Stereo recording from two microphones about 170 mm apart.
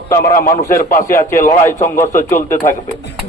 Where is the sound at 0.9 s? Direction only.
55° left (ahead or behind).